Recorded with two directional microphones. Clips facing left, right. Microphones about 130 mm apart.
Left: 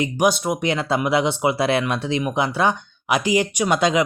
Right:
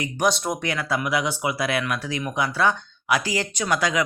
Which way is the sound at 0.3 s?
5° left (ahead or behind).